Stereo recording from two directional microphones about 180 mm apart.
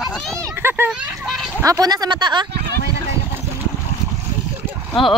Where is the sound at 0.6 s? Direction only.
10° right (ahead or behind).